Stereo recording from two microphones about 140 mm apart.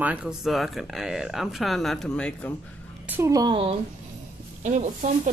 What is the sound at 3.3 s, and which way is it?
Speech, 30° right (ahead or behind).